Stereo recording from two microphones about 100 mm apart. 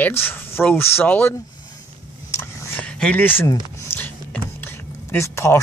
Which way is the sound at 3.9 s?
25° left (ahead or behind).